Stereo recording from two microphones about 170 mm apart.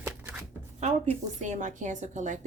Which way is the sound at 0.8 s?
40° right (ahead or behind).